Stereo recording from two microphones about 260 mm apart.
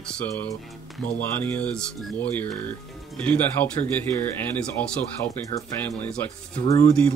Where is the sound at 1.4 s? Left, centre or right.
Centre.